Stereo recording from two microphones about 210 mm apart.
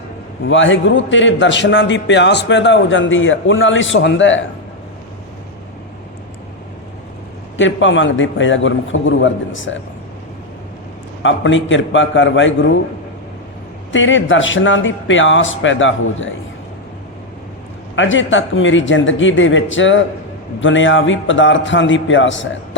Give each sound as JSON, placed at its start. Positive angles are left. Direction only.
{"t": 0.4, "sound": "a man's voice", "side_deg": 65}
{"t": 7.5, "sound": "a man's voice", "side_deg": 65}
{"t": 11.2, "sound": "a man's voice", "side_deg": 65}
{"t": 13.9, "sound": "a man's voice", "side_deg": 65}
{"t": 17.9, "sound": "a man's voice", "side_deg": 65}